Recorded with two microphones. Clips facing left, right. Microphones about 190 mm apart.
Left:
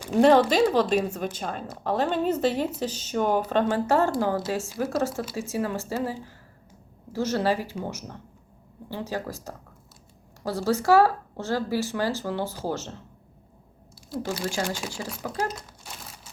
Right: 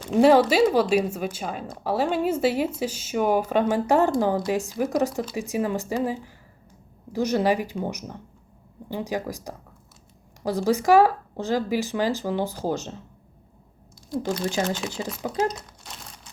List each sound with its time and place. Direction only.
0.1 s speech: 5° right (ahead or behind)
14.4 s speech: 20° right (ahead or behind)
15.4 s crumpling: 5° left (ahead or behind)